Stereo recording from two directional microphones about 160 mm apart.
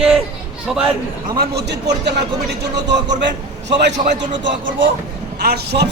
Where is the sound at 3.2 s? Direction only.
90° right.